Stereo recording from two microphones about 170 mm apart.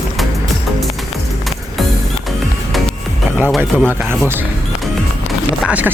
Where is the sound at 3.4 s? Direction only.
5° left (ahead or behind).